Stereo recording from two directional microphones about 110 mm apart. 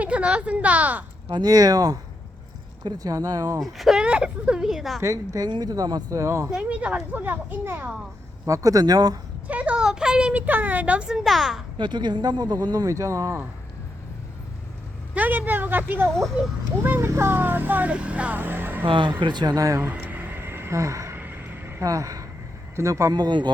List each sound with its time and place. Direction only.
0.0 s a woman's voice: 10° right (ahead or behind)
1.3 s speech: 35° right (ahead or behind)
3.6 s speech: centre (ahead or behind)
4.9 s speech: 30° right (ahead or behind)
6.5 s speech: 10° right (ahead or behind)
8.4 s speech: 30° right (ahead or behind)
9.5 s speech: 15° right (ahead or behind)
11.8 s speech: 45° right (ahead or behind)
15.1 s speech: 15° right (ahead or behind)
18.9 s speech: 45° right (ahead or behind); by 19.9 s 30° right (ahead or behind)
19.9 s vehicle: 15° right (ahead or behind)
21.8 s speech: 30° right (ahead or behind)